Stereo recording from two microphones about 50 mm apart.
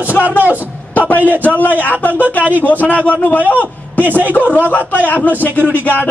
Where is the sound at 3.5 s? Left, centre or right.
Left.